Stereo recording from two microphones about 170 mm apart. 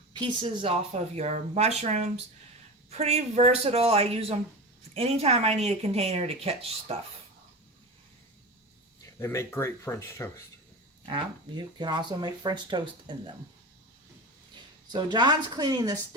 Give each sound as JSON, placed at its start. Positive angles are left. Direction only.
{"t": 0.1, "sound": "speech", "side_deg": -25}
{"t": 9.1, "sound": "speech", "side_deg": 15}
{"t": 11.0, "sound": "speech", "side_deg": -30}
{"t": 14.9, "sound": "speech", "side_deg": -25}